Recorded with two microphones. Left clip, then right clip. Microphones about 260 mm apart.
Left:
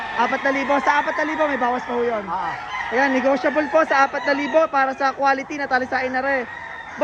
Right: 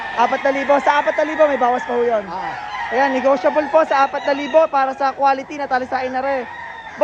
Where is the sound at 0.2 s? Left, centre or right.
Right.